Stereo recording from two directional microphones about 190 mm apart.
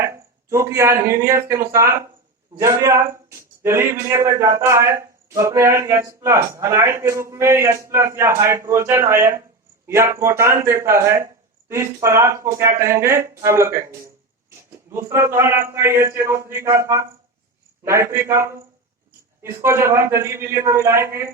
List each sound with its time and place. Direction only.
0.0 s speech: 15° right (ahead or behind)